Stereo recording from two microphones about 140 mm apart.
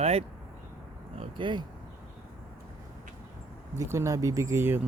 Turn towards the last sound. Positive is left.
turn(degrees=-15)  # may be behind; listen again after turning